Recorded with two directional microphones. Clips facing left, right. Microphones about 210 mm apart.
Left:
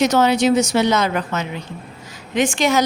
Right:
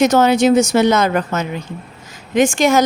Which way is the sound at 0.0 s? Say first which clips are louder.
Right 3 dB; 50° right (ahead or behind).